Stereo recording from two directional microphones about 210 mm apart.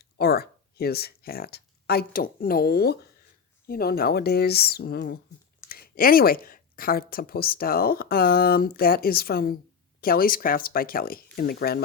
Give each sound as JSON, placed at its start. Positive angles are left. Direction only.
{"t": 0.0, "sound": "speech", "side_deg": 50}